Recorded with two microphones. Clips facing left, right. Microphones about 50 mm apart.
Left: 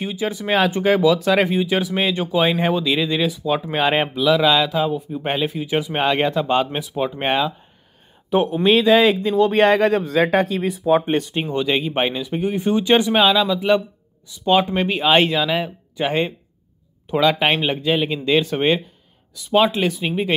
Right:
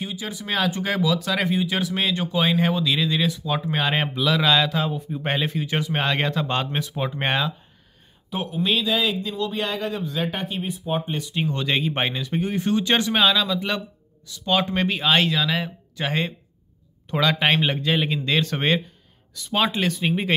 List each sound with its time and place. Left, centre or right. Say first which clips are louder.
0.0 s speech: left 7 dB; left
4.1 s speech: left 2 dB; centre
8.3 s speech: left 11 dB; left
8.5 s speech: left 8 dB; left
9.5 s speech: left 12 dB; left
11.1 s speech: left 5 dB; left
11.5 s speech: left 6 dB; centre
15.1 s speech: left 6 dB; left
15.4 s speech: left 4 dB; centre
17.1 s speech: left 3 dB; centre